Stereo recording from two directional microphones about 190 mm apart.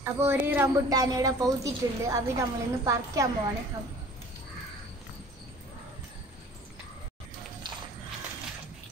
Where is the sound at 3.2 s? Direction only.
15° right (ahead or behind).